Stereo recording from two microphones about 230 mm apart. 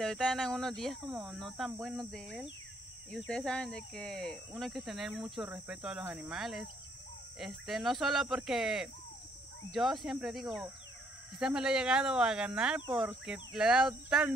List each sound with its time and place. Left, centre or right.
0.0 s speech: centre